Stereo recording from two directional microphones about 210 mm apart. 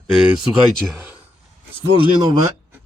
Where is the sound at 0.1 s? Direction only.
Centre (ahead or behind).